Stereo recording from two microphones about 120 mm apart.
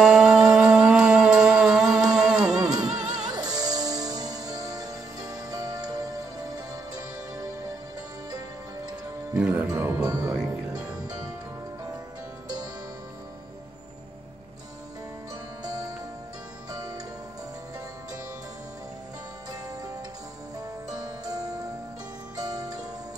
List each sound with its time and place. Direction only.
0.0 s music: 5° right (ahead or behind)
1.9 s music: 30° right (ahead or behind)
2.1 s music: 5° right (ahead or behind)
2.5 s music: 30° right (ahead or behind)
9.4 s music: 15° right (ahead or behind)
10.2 s music: 5° right (ahead or behind)
10.9 s music: 30° right (ahead or behind)
15.6 s music: 30° right (ahead or behind)
20.9 s music: 30° right (ahead or behind)